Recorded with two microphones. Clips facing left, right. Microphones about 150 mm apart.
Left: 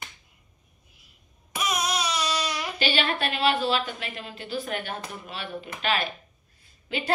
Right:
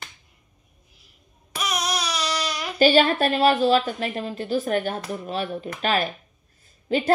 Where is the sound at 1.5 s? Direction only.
25° left (ahead or behind).